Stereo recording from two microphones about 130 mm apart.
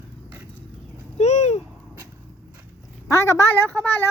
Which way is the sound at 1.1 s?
60° left (ahead or behind).